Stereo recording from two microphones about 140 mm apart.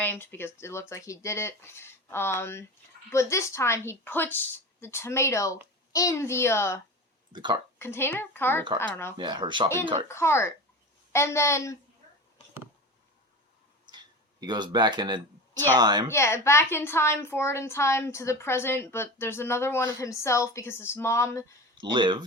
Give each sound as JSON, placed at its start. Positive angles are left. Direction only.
{"t": 0.0, "sound": "a woman's voice", "side_deg": 15}
{"t": 7.3, "sound": "speech", "side_deg": -35}
{"t": 7.8, "sound": "speech", "side_deg": 15}
{"t": 9.1, "sound": "speech", "side_deg": -30}
{"t": 10.1, "sound": "a woman's voice", "side_deg": 20}
{"t": 13.9, "sound": "a sound", "side_deg": -30}
{"t": 15.8, "sound": "speech", "side_deg": -30}
{"t": 16.0, "sound": "a woman's voice", "side_deg": 20}
{"t": 21.8, "sound": "speech", "side_deg": -35}